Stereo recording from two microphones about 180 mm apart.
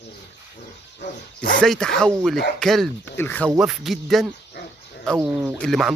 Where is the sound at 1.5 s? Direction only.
5° left (ahead or behind).